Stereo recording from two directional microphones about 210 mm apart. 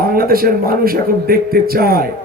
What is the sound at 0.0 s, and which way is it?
A man's voice, 45° right (ahead or behind).